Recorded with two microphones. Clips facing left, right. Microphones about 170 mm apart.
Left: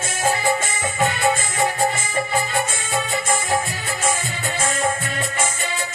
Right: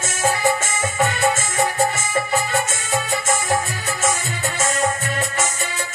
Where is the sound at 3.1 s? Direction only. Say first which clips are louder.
Right 1 dB; 20° left (ahead or behind).